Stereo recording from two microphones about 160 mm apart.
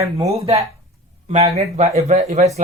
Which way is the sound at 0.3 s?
40° right (ahead or behind).